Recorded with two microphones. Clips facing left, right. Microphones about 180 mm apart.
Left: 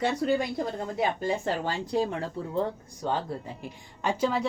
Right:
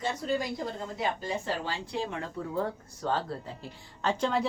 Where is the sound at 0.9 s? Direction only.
55° left (ahead or behind).